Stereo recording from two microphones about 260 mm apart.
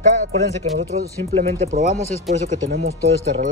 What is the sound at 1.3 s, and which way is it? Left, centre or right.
Speech, right.